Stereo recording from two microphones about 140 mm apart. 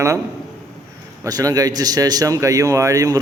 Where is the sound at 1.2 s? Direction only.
25° right (ahead or behind).